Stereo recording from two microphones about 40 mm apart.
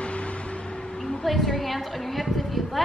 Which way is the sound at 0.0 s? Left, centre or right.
Left.